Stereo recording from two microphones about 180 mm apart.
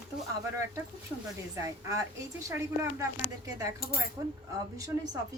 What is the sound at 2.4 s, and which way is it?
A woman's voice, 15° right (ahead or behind).